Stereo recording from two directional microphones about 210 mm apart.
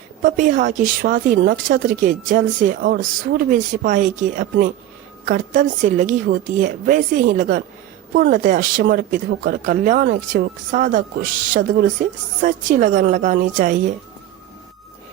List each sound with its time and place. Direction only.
0.2 s speech: 40° right (ahead or behind)